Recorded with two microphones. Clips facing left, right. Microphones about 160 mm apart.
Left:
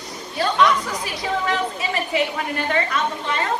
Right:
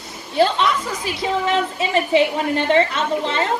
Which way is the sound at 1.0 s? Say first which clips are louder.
Right 4 dB; 25° right (ahead or behind).